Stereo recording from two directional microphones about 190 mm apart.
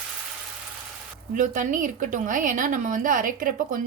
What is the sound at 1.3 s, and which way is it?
A woman's voice, 45° right (ahead or behind).